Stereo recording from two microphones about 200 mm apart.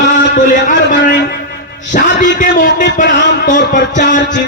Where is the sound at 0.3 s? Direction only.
40° left (ahead or behind).